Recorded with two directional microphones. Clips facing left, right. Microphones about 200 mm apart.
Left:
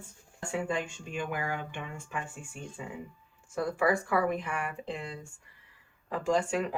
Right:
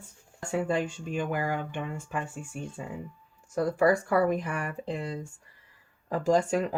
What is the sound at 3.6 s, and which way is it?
Speech, 40° right (ahead or behind).